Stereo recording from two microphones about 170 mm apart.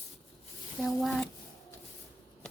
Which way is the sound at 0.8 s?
Centre (ahead or behind).